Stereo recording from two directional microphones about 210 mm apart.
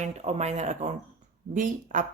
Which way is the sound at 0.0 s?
30° right (ahead or behind).